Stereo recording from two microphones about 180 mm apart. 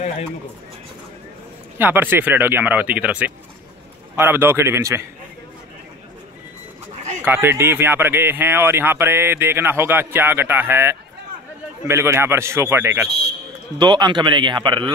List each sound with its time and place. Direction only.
1.8 s speech: 10° right (ahead or behind)
7.2 s speech: 15° right (ahead or behind)
13.7 s speech: 25° right (ahead or behind)